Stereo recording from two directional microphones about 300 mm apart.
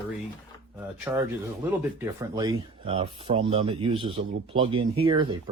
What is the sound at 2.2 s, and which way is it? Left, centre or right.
Speech, centre.